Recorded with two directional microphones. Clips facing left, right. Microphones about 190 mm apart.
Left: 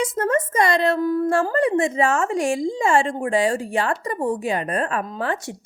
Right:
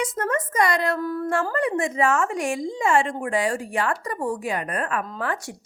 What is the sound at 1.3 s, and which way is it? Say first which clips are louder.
A woman's voice: left 4 dB; 30° left (ahead or behind).